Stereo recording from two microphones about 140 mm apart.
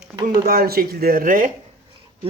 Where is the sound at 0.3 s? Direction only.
90° right; by 1.5 s 75° right (ahead or behind).